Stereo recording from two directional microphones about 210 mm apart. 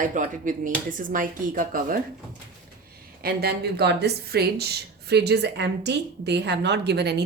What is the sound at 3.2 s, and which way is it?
A woman's voice, 50° right (ahead or behind).